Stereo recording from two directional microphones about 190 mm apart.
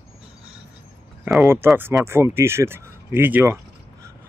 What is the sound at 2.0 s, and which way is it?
Speech, 15° right (ahead or behind).